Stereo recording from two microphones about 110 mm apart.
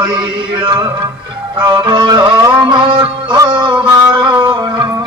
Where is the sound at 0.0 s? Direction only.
45° right (ahead or behind).